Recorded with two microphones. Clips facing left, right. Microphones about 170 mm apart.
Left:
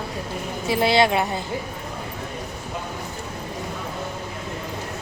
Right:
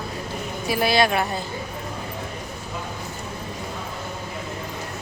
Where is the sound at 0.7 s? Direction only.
25° left (ahead or behind).